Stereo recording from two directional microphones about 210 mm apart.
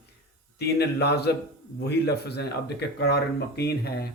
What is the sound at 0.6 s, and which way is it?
Speech, 50° left (ahead or behind).